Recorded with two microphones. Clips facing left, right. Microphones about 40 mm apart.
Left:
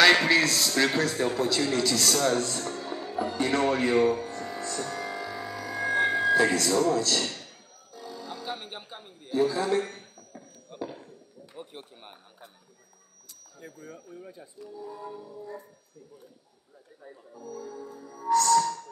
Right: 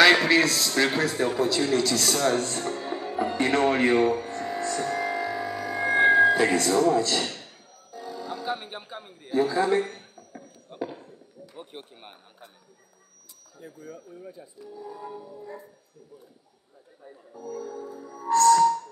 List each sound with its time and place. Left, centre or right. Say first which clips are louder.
0.0 s a sound: right 2 dB; centre
0.9 s speech: right 2 dB; centre
2.5 s speech: right 3 dB; right
4.2 s music: right 4 dB; right; by 8.6 s centre
9.3 s a sound: right 2 dB; right
13.6 s speech: right 2 dB; left
14.9 s music: right 4 dB; centre
17.6 s music: right 4 dB; right